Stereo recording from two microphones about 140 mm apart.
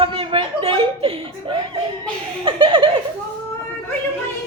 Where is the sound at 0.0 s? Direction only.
40° right (ahead or behind).